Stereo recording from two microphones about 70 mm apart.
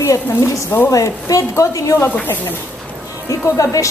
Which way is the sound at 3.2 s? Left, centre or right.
Left.